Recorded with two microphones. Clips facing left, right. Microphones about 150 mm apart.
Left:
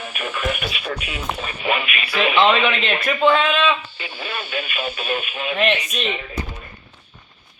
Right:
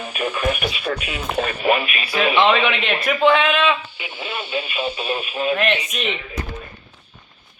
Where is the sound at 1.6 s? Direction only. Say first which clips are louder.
Right 2 dB; 40° right (ahead or behind).